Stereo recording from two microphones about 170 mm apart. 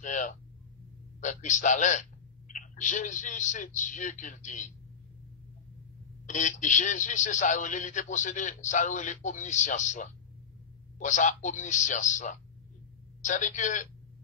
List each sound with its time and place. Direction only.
0.0 s speech: 45° left (ahead or behind)
6.2 s speech: 45° left (ahead or behind)